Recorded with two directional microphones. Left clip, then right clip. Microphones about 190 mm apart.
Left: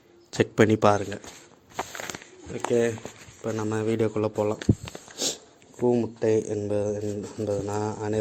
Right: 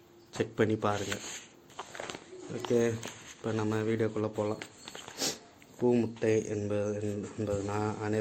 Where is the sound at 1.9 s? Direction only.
60° left (ahead or behind).